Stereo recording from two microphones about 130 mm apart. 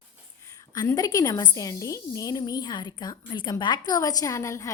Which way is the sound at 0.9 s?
30° left (ahead or behind).